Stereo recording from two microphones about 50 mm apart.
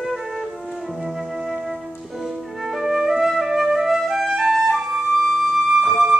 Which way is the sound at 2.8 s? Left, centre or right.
Centre.